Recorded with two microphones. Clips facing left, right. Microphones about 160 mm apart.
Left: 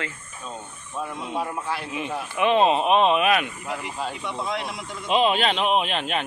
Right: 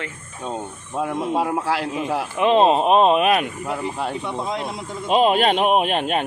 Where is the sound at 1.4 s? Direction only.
80° right.